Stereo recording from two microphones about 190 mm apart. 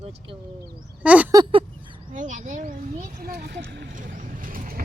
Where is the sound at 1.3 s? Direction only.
25° right (ahead or behind).